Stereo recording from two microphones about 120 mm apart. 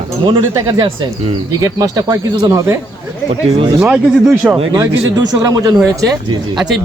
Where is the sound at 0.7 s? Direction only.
45° right (ahead or behind).